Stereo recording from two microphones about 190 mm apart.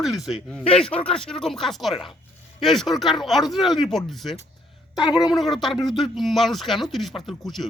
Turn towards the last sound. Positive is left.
turn(degrees=0)  # may be behind; listen again after turning